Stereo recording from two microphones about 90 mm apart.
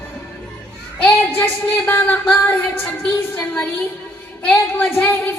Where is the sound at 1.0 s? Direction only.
20° left (ahead or behind).